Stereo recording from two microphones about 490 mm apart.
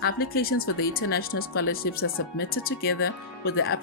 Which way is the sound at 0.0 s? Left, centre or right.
Centre.